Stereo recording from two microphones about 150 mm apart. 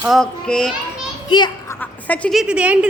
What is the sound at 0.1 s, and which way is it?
Speech, 5° left (ahead or behind).